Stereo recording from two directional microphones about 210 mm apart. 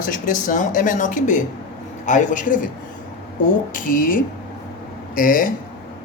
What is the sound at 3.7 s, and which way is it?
A woman's voice, 40° left (ahead or behind).